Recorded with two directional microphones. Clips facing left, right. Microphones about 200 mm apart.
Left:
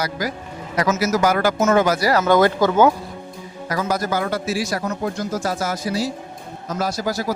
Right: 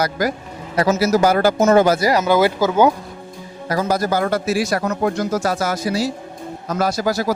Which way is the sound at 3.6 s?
30° right (ahead or behind).